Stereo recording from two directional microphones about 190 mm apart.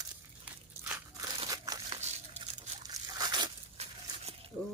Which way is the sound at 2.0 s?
35° right (ahead or behind).